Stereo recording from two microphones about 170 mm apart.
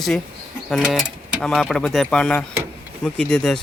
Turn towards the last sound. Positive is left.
turn(degrees=5)  # may be behind; listen again after turning